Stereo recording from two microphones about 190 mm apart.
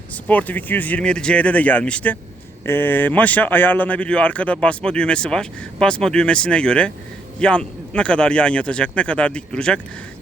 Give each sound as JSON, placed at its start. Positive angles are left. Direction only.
{"t": 0.1, "sound": "speech", "side_deg": 10}